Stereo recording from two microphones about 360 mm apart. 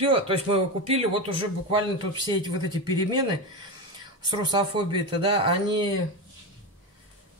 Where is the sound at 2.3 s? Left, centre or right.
Centre.